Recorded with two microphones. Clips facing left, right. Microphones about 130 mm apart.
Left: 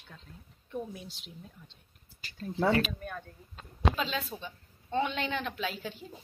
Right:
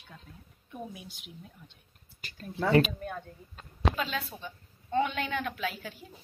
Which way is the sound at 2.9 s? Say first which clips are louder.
Right 3 dB; 10° right (ahead or behind).